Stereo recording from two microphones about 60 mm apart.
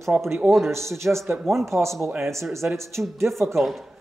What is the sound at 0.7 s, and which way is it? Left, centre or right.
Speech, right.